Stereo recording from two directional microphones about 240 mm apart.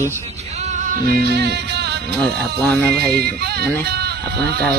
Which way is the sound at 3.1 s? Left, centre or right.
Right.